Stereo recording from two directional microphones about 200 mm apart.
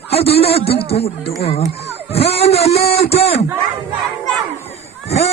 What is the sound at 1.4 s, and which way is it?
Speech, 30° left (ahead or behind).